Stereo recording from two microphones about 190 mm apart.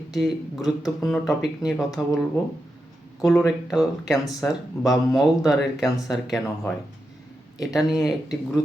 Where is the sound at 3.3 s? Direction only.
Centre (ahead or behind).